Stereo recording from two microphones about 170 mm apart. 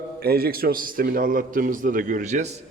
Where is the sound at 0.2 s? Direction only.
65° right (ahead or behind).